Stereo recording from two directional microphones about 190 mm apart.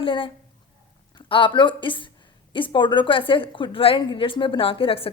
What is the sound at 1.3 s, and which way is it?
A woman's voice, 25° left (ahead or behind).